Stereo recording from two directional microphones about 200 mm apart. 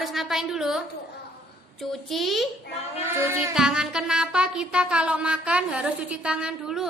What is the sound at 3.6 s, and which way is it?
Music, 5° right (ahead or behind).